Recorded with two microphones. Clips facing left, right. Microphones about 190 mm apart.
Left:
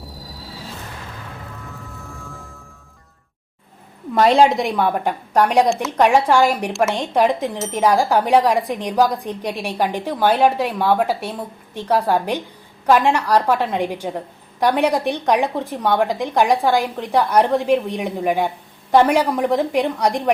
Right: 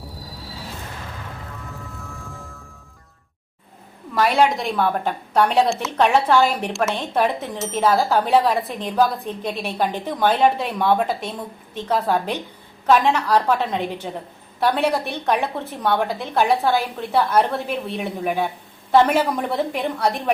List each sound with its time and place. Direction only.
1.6 s music: centre (ahead or behind)
4.1 s a woman's voice: 30° left (ahead or behind)